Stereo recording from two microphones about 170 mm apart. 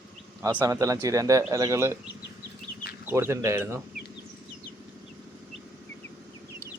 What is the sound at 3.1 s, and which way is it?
Speech, 15° right (ahead or behind).